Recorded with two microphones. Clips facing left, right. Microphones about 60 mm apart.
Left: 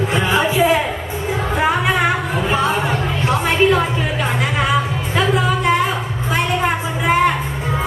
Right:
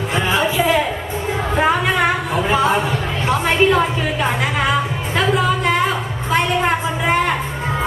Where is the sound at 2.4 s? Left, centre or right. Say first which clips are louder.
Right 2 dB; centre.